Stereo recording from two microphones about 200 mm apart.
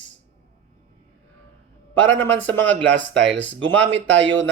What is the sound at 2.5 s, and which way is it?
Speech, 10° left (ahead or behind).